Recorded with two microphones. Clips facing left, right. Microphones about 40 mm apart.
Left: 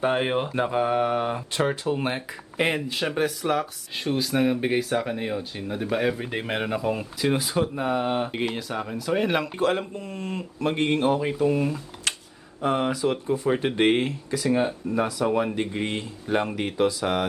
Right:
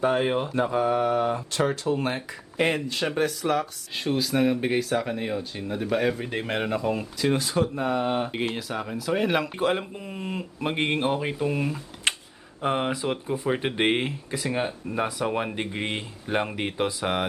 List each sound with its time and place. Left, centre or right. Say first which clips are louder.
0.0 s mantra: even; centre
0.4 s speech: even; left; by 9.5 s centre
9.6 s speech: left 1 dB; centre
12.1 s a sound: right 3 dB; right
12.6 s speech: left 2 dB; centre